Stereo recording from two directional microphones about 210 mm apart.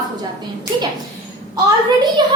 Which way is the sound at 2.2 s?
20° right (ahead or behind).